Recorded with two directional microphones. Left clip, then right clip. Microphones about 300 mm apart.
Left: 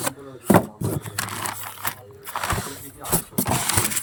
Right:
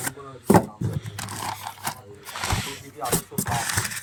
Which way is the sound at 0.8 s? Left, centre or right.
Centre.